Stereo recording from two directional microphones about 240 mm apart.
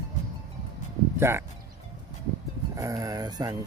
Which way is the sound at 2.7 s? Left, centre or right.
Centre.